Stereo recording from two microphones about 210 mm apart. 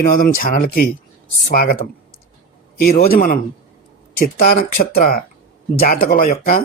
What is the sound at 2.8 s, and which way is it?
A man's voice, 45° left (ahead or behind).